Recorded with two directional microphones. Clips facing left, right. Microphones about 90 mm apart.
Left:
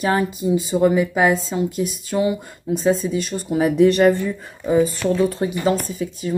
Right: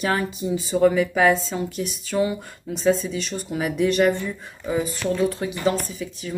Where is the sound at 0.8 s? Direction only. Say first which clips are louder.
Even; 20° left (ahead or behind).